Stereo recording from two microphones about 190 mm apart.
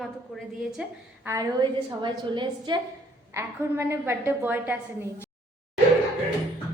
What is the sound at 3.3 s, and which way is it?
A woman's voice, 15° right (ahead or behind).